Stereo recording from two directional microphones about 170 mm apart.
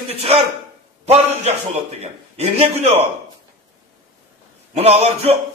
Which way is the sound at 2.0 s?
40° right (ahead or behind).